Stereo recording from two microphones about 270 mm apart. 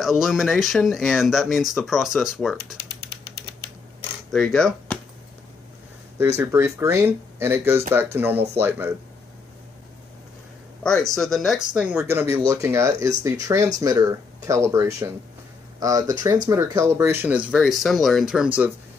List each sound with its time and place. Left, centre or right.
0.0 s speech: centre
4.3 s speech: centre
6.1 s speech: centre
10.8 s speech: centre